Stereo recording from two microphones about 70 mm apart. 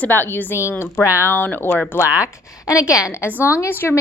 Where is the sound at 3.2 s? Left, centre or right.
Left.